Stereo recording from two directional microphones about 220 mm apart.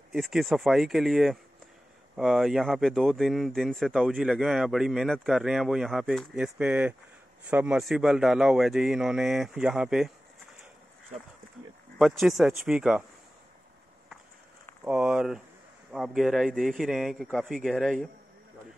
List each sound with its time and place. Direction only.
0.1 s speech: centre (ahead or behind)
12.0 s speech: centre (ahead or behind)
14.9 s speech: 5° right (ahead or behind)